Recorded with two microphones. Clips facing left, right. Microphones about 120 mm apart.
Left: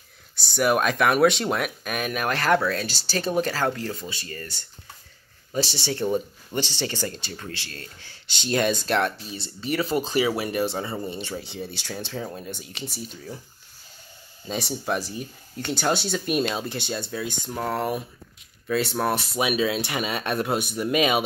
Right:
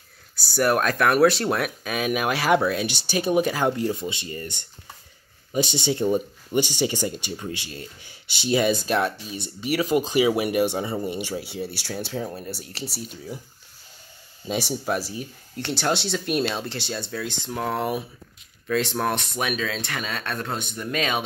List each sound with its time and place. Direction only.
0.4 s speech: centre (ahead or behind)
14.5 s speech: 5° right (ahead or behind); by 21.2 s 10° left (ahead or behind)